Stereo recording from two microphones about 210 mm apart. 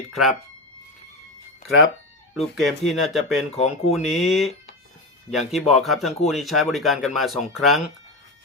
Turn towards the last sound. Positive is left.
turn(degrees=0)  # may be behind; listen again after turning